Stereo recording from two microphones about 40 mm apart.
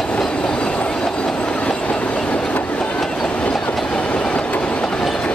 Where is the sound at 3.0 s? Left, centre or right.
Centre.